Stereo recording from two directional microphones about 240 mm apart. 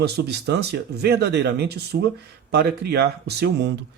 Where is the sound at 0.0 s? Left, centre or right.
Right.